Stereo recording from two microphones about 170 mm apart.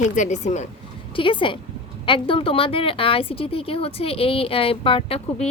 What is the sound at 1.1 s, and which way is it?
A woman's voice, 30° left (ahead or behind).